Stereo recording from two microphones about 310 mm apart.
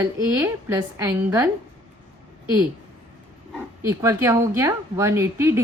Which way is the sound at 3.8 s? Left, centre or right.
Centre.